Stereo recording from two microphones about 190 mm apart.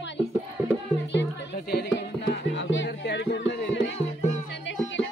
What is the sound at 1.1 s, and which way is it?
Music, 60° left (ahead or behind).